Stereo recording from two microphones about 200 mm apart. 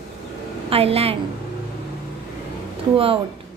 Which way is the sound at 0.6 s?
30° right (ahead or behind).